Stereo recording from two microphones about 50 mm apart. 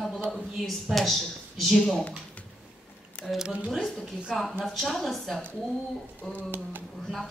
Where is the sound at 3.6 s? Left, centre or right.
Centre.